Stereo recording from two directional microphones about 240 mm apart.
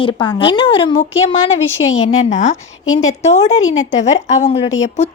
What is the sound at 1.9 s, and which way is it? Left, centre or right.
Speech, left.